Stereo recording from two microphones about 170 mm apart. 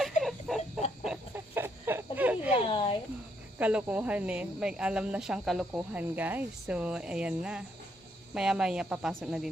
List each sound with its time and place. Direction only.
0.2 s a sound: centre (ahead or behind)
1.0 s chicken: 10° right (ahead or behind)
2.6 s speech: 30° left (ahead or behind)
3.6 s speech: 10° right (ahead or behind)